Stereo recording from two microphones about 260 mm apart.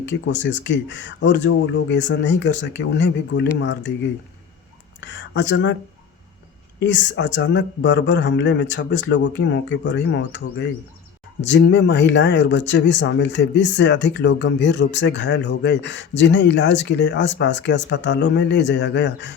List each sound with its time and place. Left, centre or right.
0.0 s speech: left
4.9 s speech: left
6.7 s speech: left